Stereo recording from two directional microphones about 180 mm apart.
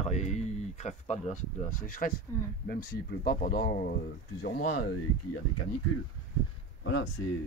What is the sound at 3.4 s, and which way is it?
Speech, 65° left (ahead or behind).